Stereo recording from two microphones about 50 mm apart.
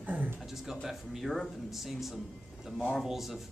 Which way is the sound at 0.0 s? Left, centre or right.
Right.